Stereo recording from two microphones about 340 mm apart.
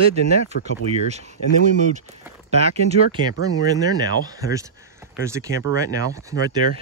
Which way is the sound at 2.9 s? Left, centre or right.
Centre.